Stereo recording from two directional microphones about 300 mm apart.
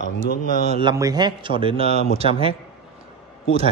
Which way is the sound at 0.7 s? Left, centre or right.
Centre.